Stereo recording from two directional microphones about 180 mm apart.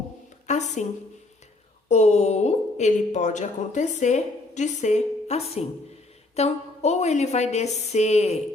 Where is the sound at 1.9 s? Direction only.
40° left (ahead or behind).